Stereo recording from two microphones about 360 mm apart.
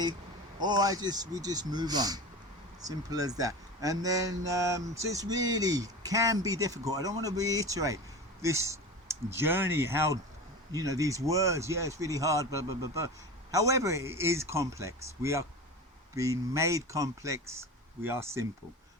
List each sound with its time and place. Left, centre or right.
0.6 s speech: centre